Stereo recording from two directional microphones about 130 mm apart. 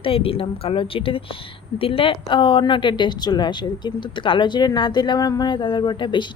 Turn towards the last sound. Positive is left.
turn(degrees=35)  # may be behind; listen again after turning